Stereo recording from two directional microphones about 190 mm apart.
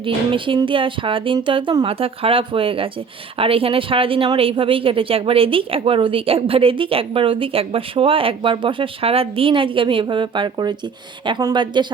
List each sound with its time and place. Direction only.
0.0 s speech: 25° right (ahead or behind)